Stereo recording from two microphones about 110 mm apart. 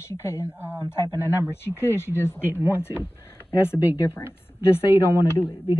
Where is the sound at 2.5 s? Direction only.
20° right (ahead or behind).